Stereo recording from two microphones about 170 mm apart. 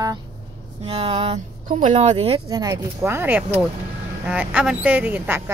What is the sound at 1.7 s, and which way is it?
Speech, 45° right (ahead or behind).